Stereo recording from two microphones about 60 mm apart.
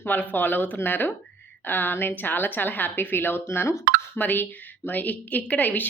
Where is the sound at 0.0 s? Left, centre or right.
Left.